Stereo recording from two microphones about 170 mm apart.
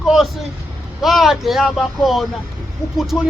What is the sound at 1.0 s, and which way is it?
Speech, centre (ahead or behind).